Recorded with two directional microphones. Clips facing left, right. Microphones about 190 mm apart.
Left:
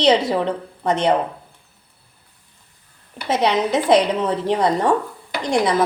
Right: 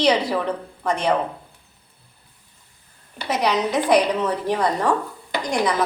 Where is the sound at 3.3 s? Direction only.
25° left (ahead or behind).